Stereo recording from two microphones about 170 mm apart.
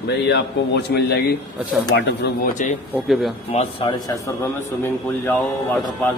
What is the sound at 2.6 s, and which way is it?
Speech, 45° left (ahead or behind).